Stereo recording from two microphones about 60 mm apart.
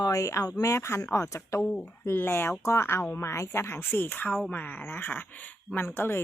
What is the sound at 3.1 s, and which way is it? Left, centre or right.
Speech, left.